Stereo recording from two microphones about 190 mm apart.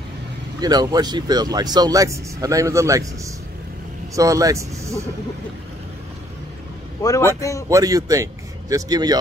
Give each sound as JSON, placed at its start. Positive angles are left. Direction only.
{"t": 0.6, "sound": "speech", "side_deg": -20}
{"t": 7.0, "sound": "a man's voice", "side_deg": 15}
{"t": 7.7, "sound": "speech", "side_deg": -15}